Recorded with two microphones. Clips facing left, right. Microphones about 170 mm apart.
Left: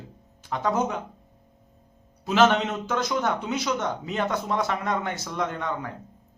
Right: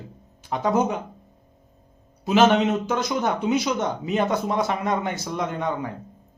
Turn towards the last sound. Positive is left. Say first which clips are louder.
# right 3 dB
turn(degrees=-15)  # may be behind; listen again after turning